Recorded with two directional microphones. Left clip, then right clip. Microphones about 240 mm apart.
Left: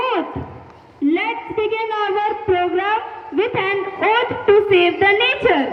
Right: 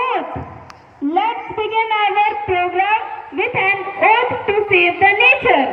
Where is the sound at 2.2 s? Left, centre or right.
Centre.